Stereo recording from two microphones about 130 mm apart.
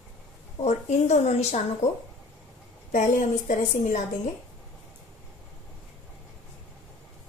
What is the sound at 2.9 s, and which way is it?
A woman's voice, 85° left.